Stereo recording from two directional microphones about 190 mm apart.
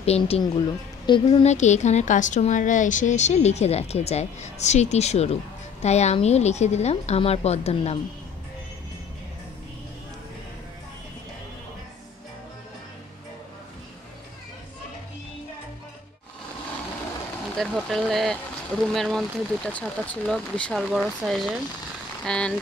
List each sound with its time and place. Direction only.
0.0 s a woman's voice: 30° left (ahead or behind)
17.6 s speech: centre (ahead or behind)